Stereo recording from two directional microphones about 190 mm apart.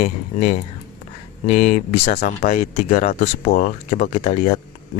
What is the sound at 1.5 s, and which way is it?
Speech, 40° left (ahead or behind).